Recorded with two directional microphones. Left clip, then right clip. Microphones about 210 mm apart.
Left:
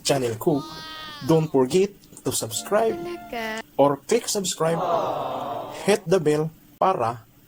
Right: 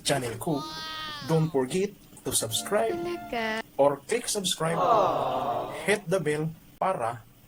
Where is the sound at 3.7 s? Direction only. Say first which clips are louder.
Left 5 dB; 10° left (ahead or behind).